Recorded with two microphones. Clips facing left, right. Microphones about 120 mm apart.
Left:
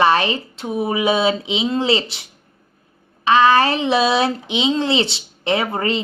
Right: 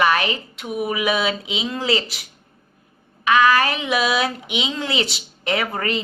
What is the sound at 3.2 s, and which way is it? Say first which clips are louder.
Speech: left 3 dB; 30° left (ahead or behind).